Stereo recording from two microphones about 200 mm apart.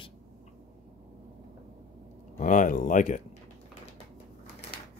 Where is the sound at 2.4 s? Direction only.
40° left (ahead or behind).